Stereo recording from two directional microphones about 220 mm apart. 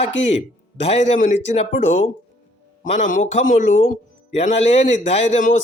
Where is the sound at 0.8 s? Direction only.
30° left (ahead or behind).